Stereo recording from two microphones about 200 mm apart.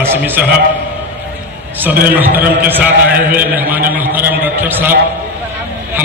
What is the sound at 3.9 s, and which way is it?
A man's voice, 10° right (ahead or behind).